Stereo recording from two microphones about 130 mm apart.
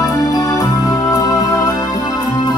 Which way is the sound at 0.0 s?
30° left (ahead or behind).